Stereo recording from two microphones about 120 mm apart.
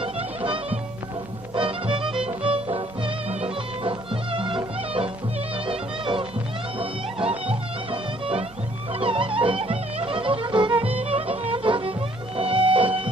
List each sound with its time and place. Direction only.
0.0 s music: 50° right (ahead or behind)